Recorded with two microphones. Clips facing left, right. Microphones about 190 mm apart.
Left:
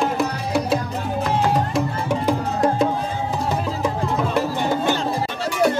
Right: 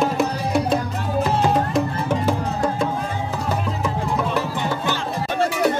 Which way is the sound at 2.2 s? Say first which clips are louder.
Left 2 dB; 20° left (ahead or behind).